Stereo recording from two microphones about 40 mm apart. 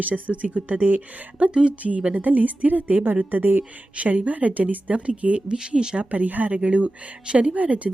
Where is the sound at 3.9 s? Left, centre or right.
Right.